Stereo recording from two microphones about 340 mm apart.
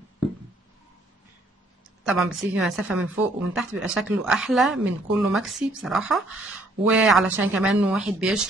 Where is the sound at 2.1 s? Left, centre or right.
Centre.